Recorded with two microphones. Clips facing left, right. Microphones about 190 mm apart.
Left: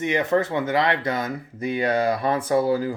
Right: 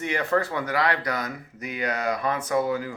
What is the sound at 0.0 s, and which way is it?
Speech, 20° left (ahead or behind).